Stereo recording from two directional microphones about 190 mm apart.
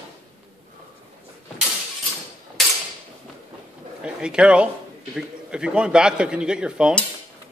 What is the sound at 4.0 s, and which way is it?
Speech, 5° right (ahead or behind).